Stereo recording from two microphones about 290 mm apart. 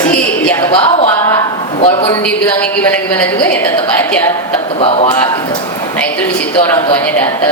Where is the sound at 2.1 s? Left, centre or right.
Centre.